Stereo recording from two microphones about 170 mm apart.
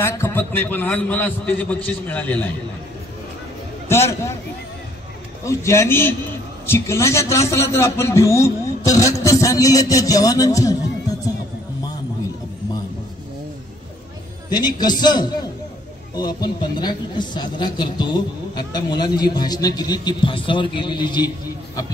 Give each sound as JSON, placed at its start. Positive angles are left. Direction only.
{"t": 0.0, "sound": "a man's voice", "side_deg": 15}
{"t": 3.9, "sound": "a man's voice", "side_deg": 15}
{"t": 5.4, "sound": "a man's voice", "side_deg": 15}
{"t": 14.5, "sound": "speech", "side_deg": 25}